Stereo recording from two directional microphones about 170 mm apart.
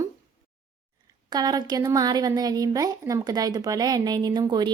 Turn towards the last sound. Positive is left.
turn(degrees=-25)  # may be behind; listen again after turning